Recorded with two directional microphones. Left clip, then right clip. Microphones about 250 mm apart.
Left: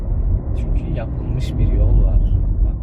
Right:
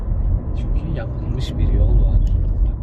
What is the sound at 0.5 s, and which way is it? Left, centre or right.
Vehicle, centre.